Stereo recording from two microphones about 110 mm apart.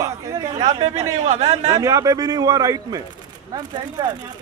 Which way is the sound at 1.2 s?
85° right.